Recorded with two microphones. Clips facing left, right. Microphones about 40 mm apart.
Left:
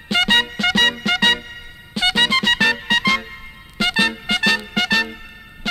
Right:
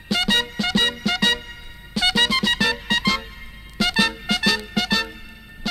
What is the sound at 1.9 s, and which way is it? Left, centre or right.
Music, left.